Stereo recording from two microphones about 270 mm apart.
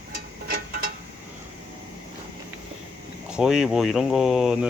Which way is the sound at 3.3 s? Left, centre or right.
Centre.